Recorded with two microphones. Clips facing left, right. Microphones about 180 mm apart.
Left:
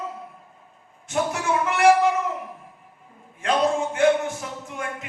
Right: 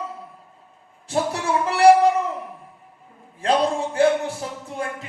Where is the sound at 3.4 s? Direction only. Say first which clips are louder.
Right 1 dB; 35° right (ahead or behind).